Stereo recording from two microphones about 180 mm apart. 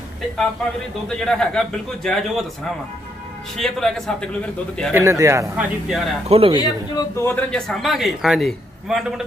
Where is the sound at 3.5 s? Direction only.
Centre (ahead or behind).